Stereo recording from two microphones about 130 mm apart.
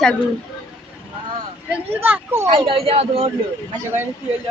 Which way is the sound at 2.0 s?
15° right (ahead or behind).